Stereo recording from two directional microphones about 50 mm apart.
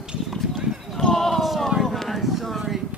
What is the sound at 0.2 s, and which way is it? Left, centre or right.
Clip-clop, centre.